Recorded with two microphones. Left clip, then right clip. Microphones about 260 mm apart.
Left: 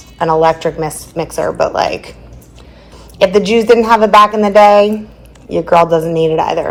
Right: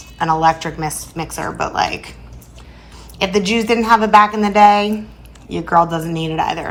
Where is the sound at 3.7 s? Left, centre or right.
Centre.